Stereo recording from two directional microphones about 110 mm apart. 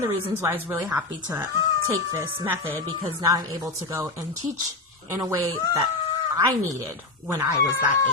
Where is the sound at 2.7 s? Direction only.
35° right (ahead or behind).